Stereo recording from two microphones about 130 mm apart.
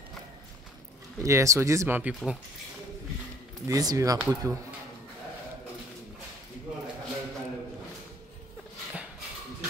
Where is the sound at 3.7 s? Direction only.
25° right (ahead or behind).